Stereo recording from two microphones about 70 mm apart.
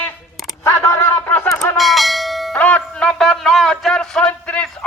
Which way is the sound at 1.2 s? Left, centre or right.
Left.